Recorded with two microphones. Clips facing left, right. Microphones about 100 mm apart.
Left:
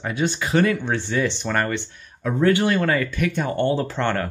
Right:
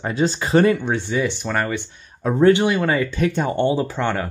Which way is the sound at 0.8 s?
15° right (ahead or behind).